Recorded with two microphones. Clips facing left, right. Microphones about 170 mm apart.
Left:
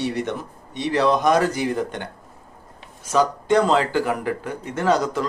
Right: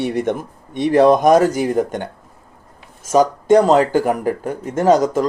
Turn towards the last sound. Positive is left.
turn(degrees=-45)  # may be behind; listen again after turning